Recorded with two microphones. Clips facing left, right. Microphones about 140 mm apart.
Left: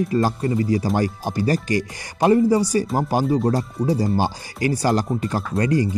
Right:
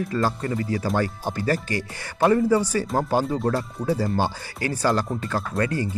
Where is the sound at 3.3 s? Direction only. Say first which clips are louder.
Left 4 dB; 35° left (ahead or behind).